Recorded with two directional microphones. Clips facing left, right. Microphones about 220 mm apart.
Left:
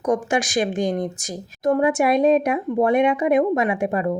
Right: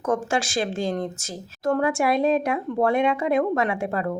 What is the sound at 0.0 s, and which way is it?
Speech, 15° left (ahead or behind).